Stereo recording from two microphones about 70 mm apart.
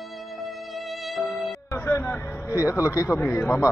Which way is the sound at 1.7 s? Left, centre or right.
Left.